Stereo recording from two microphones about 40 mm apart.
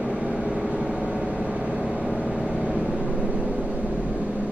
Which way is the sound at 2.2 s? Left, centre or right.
Centre.